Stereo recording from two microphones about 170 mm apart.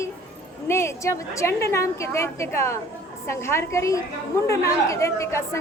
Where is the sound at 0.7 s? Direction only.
15° left (ahead or behind).